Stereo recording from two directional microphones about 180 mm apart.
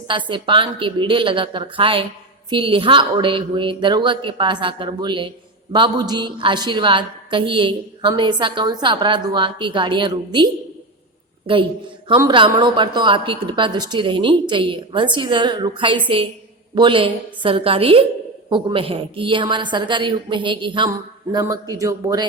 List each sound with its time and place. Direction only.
0.1 s a woman's voice: 25° right (ahead or behind)